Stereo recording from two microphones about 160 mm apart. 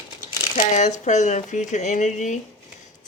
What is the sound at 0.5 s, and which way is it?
Speech, 50° left (ahead or behind).